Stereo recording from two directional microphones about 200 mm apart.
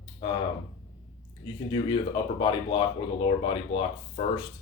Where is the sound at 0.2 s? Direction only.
25° left (ahead or behind).